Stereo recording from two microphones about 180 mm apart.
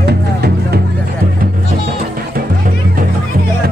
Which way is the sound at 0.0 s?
65° right (ahead or behind).